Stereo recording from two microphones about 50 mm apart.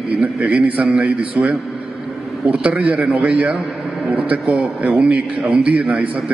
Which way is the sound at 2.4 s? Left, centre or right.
Right.